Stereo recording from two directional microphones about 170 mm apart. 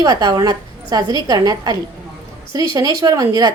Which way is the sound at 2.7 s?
20° right (ahead or behind).